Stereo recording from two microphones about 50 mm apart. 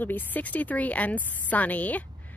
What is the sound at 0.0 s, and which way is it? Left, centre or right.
Speech, left.